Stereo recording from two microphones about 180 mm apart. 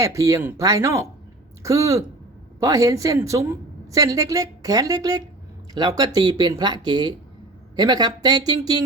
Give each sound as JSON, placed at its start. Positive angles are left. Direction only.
{"t": 0.0, "sound": "a woman's voice", "side_deg": -15}